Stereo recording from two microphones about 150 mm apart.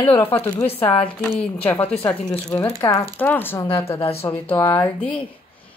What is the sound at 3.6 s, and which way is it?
Speech, 40° left (ahead or behind).